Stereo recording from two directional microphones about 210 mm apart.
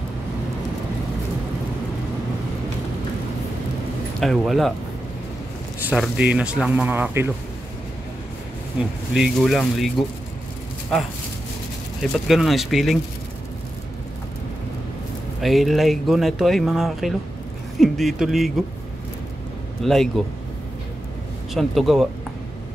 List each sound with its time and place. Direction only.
4.2 s speech: centre (ahead or behind)
5.9 s speech: 5° right (ahead or behind)
8.8 s speech: 5° right (ahead or behind)
12.0 s speech: centre (ahead or behind)
15.4 s speech: centre (ahead or behind)
19.8 s speech: centre (ahead or behind)
21.5 s speech: centre (ahead or behind)